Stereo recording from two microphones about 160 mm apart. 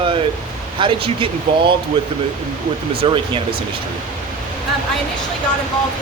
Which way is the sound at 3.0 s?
35° right (ahead or behind).